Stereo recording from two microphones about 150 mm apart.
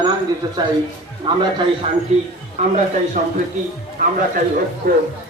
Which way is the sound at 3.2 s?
50° right (ahead or behind).